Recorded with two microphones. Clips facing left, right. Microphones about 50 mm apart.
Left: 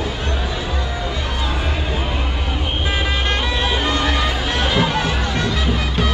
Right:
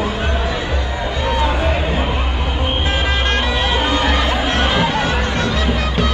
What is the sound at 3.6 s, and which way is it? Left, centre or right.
Music, right.